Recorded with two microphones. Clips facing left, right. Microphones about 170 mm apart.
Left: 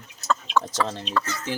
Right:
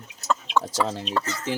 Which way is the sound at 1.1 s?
30° right (ahead or behind).